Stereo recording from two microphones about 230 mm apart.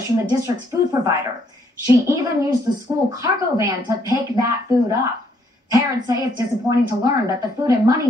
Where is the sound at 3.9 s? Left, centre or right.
Centre.